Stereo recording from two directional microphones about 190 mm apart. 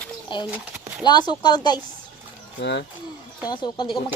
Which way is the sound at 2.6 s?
65° left (ahead or behind).